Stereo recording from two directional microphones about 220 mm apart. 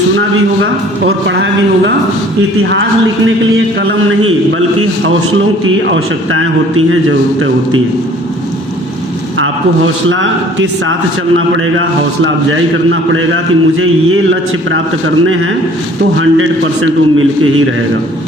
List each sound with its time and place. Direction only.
0.2 s a man's voice: 55° right (ahead or behind)
3.8 s a man's voice: 65° right (ahead or behind)
9.4 s a man's voice: 60° right (ahead or behind)